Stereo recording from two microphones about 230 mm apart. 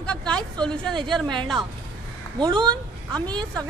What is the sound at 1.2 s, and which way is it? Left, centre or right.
Speech, centre.